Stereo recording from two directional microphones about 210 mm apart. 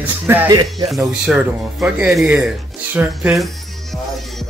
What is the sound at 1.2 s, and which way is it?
Speech, 5° right (ahead or behind).